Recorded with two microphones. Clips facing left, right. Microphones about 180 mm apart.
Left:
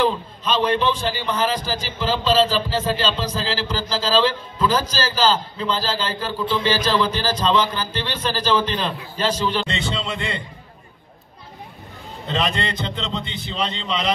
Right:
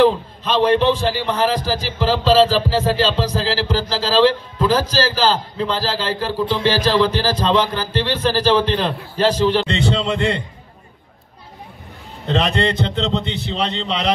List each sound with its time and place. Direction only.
0.0 s a man's voice: 70° right (ahead or behind)
12.3 s speech: 70° right (ahead or behind)